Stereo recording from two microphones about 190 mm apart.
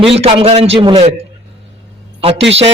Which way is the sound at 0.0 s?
30° right (ahead or behind).